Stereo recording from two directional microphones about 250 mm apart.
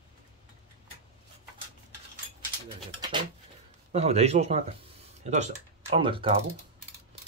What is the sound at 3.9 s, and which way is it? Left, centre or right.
Speech, right.